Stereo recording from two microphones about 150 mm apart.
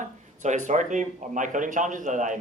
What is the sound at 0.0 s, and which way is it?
Speech, 55° right (ahead or behind).